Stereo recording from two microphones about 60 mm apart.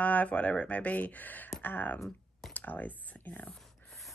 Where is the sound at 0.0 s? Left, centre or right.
Left.